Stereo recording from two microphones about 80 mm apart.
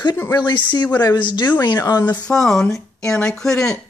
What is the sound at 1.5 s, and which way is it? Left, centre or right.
Speech, left.